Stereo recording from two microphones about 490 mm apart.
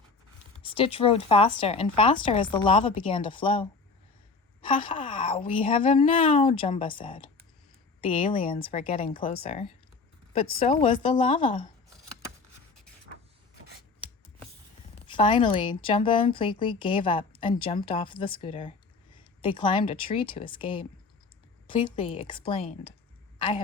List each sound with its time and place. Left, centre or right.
0.7 s speech: centre
15.0 s speech: centre